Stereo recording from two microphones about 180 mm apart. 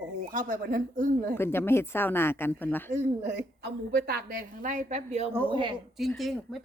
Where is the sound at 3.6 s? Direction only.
65° right (ahead or behind); by 5.3 s 35° right (ahead or behind).